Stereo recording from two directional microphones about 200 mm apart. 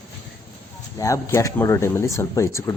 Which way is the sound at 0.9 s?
15° left (ahead or behind).